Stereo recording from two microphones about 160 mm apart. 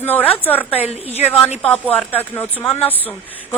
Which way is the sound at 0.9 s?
40° left (ahead or behind).